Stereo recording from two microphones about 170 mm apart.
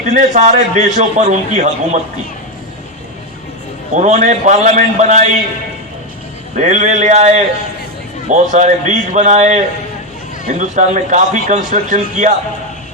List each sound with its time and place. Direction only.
0.0 s a man's voice: 45° right (ahead or behind)
3.9 s a man's voice: 45° right (ahead or behind)
6.6 s a man's voice: 45° right (ahead or behind)